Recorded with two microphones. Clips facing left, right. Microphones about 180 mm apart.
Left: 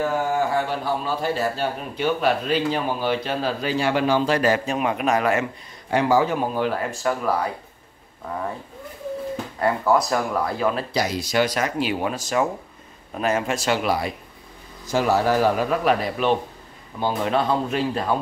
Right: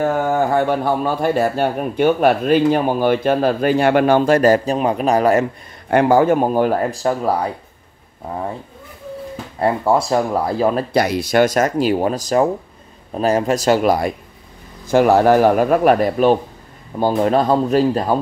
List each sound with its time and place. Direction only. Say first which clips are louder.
0.0 s a man's voice: right 5 dB; 55° right (ahead or behind); by 5.5 s 35° right (ahead or behind)
5.9 s a man's voice: right 6 dB; 55° right (ahead or behind); by 7.4 s 35° right (ahead or behind)
9.6 s speech: right 4 dB; 30° right (ahead or behind)
11.0 s a man's voice: right 8 dB; 60° right (ahead or behind)
14.9 s a man's voice: right 8 dB; 55° right (ahead or behind); by 18.1 s 40° right (ahead or behind)